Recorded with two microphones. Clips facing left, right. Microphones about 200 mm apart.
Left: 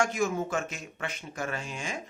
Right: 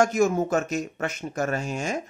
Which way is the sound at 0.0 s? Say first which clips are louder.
Right 7 dB; 40° right (ahead or behind).